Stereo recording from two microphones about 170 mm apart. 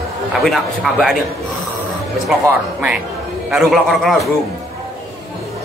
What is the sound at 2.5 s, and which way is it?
A man's voice, 5° right (ahead or behind).